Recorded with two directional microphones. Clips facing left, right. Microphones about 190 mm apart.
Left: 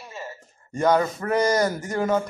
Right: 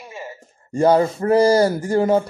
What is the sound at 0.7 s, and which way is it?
A man's voice, 30° right (ahead or behind).